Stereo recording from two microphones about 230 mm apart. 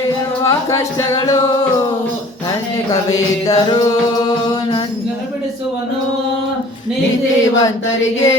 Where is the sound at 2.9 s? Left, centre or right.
Centre.